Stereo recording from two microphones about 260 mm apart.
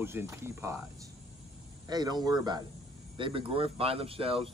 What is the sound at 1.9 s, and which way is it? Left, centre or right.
Speech, centre.